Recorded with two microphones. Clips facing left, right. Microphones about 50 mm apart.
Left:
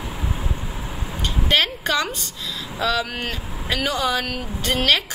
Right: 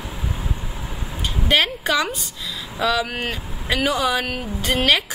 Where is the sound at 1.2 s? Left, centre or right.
Centre.